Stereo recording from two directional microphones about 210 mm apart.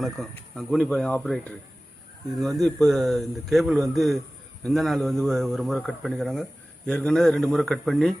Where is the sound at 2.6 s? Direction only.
Centre (ahead or behind).